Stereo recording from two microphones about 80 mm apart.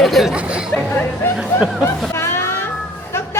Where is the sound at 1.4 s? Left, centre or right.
Centre.